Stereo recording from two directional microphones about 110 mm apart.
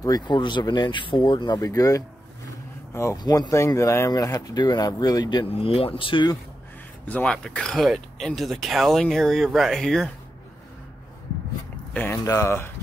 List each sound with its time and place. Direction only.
0.0 s speech: 40° left (ahead or behind)
5.5 s speech: 60° left (ahead or behind)
7.1 s speech: 10° left (ahead or behind)
11.9 s speech: 20° left (ahead or behind)